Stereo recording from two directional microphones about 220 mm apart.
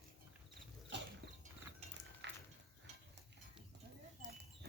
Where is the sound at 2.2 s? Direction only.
55° right (ahead or behind).